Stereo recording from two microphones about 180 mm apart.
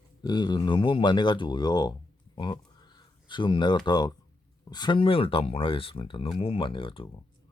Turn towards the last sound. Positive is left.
turn(degrees=30)  # may be behind; listen again after turning